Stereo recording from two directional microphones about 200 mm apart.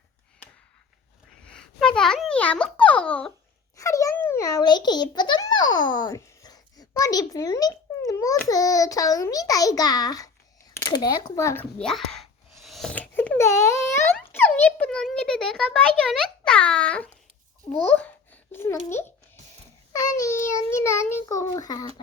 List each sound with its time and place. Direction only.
1.5 s a sound: 5° left (ahead or behind)
3.8 s a child's voice: 15° left (ahead or behind)
5.5 s a child's voice: 75° left (ahead or behind)
5.7 s a child's voice: 20° left (ahead or behind)
11.8 s a sound: centre (ahead or behind)
17.7 s a child's voice: 5° left (ahead or behind)
20.1 s a child's voice: 15° left (ahead or behind)